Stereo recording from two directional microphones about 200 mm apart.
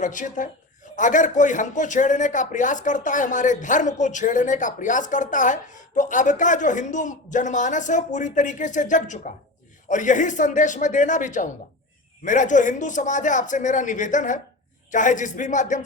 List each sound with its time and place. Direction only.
0.0 s a man's voice: 40° left (ahead or behind)